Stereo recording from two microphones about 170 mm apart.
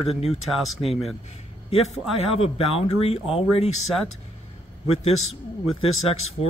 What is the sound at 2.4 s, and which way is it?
Speech, 35° left (ahead or behind).